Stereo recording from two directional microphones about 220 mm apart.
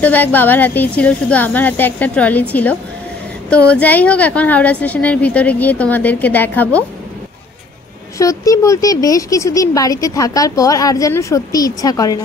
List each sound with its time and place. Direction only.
0.0 s speech: 10° left (ahead or behind)
8.2 s speech: 15° left (ahead or behind)